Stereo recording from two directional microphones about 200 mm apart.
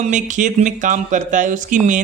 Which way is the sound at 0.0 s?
40° right (ahead or behind).